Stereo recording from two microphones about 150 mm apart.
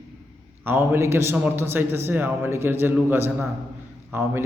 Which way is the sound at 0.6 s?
15° right (ahead or behind).